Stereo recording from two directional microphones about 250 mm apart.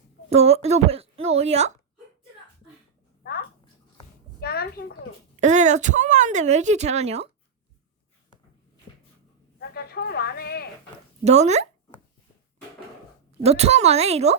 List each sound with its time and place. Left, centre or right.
0.3 s speech: right
4.4 s a woman's voice: left
5.4 s speech: right
9.6 s speech: left
11.2 s speech: right
13.4 s speech: right